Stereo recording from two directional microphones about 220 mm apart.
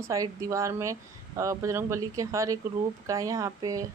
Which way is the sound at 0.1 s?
15° right (ahead or behind).